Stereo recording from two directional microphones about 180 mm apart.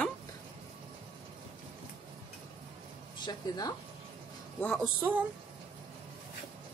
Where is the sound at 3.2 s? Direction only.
20° left (ahead or behind).